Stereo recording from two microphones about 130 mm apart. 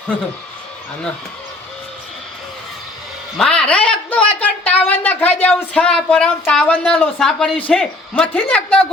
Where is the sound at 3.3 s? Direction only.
5° left (ahead or behind).